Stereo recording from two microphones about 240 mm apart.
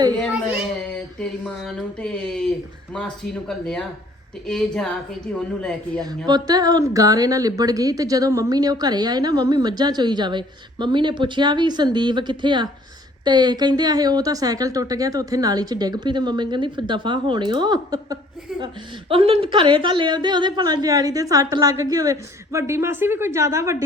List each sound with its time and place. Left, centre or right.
0.2 s whimper: centre
1.2 s speech: centre
6.0 s speech: centre